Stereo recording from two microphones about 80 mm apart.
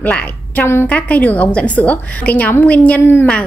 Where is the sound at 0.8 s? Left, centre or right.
Centre.